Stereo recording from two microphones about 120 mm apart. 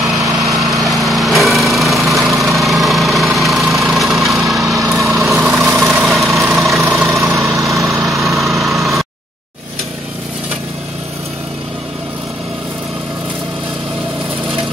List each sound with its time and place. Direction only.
0.0 s lawn mower: centre (ahead or behind)
2.1 s engine: centre (ahead or behind)
4.8 s lawn mower: centre (ahead or behind)
5.4 s vehicle: centre (ahead or behind)
7.0 s vehicle: 25° right (ahead or behind)
7.9 s lawn mower: centre (ahead or behind)